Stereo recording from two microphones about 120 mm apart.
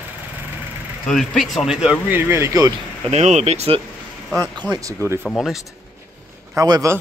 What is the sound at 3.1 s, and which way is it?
Speech, 65° right (ahead or behind).